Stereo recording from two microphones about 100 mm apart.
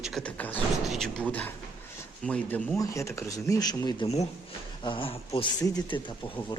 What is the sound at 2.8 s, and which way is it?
Speech, 30° left (ahead or behind).